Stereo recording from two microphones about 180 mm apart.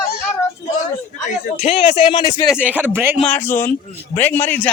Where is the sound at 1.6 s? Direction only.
35° left (ahead or behind).